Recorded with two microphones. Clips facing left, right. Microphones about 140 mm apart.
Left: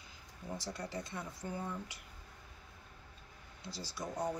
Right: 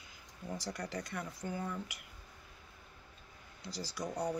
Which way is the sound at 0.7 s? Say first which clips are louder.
Right 1 dB; 25° left (ahead or behind).